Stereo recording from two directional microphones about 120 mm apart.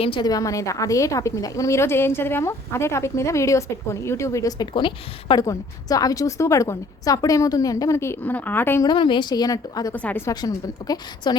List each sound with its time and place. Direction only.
0.0 s a woman's voice: 45° left (ahead or behind)
0.3 s a woman's voice: 30° left (ahead or behind)
5.4 s a woman's voice: 30° left (ahead or behind)
8.8 s a woman's voice: 40° left (ahead or behind)
9.9 s a woman's voice: 15° left (ahead or behind)
10.2 s a woman's voice: 35° left (ahead or behind)